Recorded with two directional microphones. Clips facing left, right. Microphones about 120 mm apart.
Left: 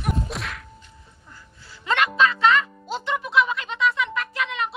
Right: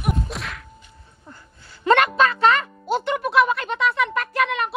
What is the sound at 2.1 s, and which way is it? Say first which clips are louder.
Speech: right 1 dB; 50° right (ahead or behind).